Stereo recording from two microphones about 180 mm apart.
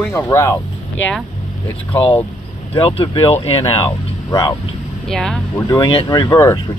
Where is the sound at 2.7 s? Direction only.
30° left (ahead or behind).